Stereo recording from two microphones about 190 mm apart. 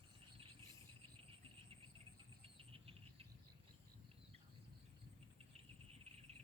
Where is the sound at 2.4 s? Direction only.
30° right (ahead or behind).